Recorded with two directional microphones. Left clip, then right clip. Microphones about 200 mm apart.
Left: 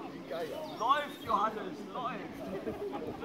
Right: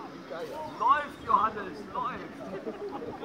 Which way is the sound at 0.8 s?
35° right (ahead or behind).